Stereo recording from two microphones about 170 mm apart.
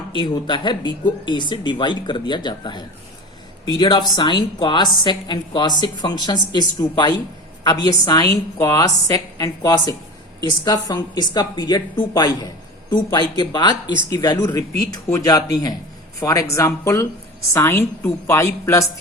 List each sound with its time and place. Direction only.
0.1 s a woman's voice: 30° left (ahead or behind)